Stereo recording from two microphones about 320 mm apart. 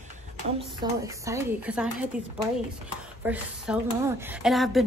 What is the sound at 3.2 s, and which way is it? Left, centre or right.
Speech, centre.